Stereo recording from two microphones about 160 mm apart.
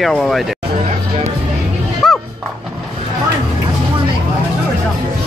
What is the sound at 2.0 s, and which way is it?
Music, 5° left (ahead or behind).